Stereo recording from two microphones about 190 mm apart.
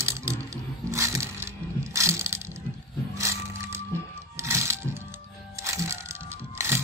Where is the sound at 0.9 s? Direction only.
15° right (ahead or behind).